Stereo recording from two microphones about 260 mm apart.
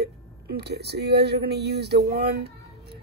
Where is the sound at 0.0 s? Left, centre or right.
Right.